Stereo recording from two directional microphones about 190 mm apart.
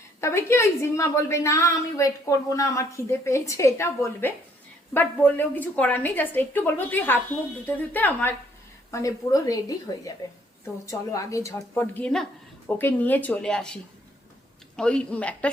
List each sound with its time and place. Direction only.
0.2 s a woman's voice: 15° left (ahead or behind)
14.8 s a woman's voice: 5° left (ahead or behind)